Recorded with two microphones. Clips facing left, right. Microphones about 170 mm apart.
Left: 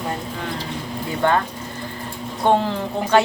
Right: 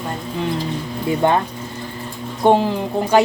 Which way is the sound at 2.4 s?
15° right (ahead or behind).